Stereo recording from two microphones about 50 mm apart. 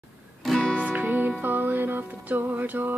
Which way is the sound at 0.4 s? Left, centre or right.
Centre.